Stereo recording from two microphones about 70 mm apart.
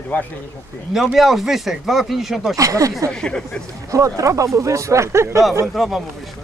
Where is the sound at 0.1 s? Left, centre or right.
Left.